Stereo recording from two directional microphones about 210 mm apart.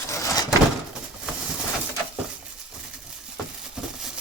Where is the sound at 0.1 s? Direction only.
15° left (ahead or behind).